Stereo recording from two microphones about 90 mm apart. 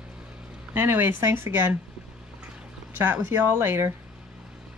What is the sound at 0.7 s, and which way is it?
Speech, 25° right (ahead or behind).